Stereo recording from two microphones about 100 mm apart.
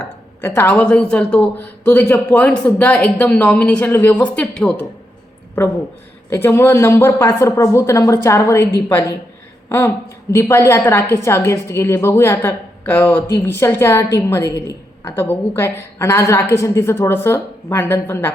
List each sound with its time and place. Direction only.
0.4 s speech: 20° left (ahead or behind)
6.3 s a woman's voice: 25° left (ahead or behind)